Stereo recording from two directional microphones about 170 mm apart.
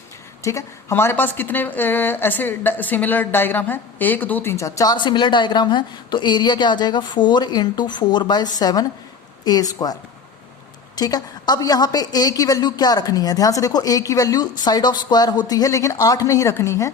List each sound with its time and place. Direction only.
0.4 s a woman's voice: 15° left (ahead or behind)